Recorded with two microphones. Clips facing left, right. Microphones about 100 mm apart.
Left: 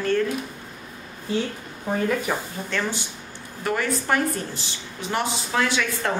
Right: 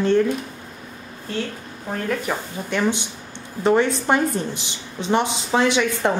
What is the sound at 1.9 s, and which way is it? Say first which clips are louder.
Speech: left 1 dB; 5° left (ahead or behind).